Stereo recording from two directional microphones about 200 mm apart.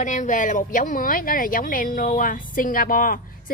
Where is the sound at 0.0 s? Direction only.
40° left (ahead or behind).